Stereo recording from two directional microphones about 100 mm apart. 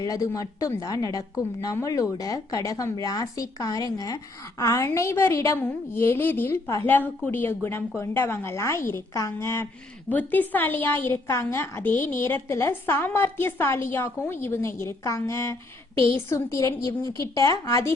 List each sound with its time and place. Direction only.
0.0 s a woman's voice: 35° left (ahead or behind)
5.5 s a woman's voice: 20° left (ahead or behind)
10.1 s a woman's voice: 15° left (ahead or behind); by 17.9 s 35° left (ahead or behind)